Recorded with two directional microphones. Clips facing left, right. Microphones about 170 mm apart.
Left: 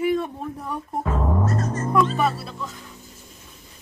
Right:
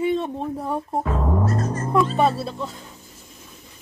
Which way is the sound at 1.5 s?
35° right (ahead or behind).